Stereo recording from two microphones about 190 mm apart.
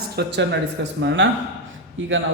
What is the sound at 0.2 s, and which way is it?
A man's voice, 65° right (ahead or behind).